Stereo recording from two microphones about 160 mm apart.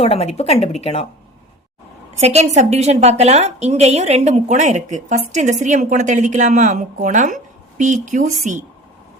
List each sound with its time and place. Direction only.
0.0 s a woman's voice: 40° left (ahead or behind)
2.2 s a woman's voice: 45° right (ahead or behind)